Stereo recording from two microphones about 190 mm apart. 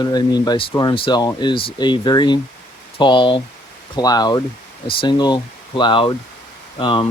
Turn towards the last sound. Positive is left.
turn(degrees=25)  # may be behind; listen again after turning